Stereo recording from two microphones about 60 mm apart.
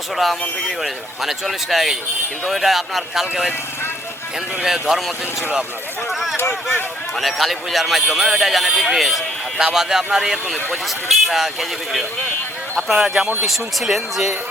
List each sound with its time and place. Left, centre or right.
0.2 s a man's voice: centre
4.6 s a man's voice: centre
6.3 s speech: left
7.2 s a man's voice: centre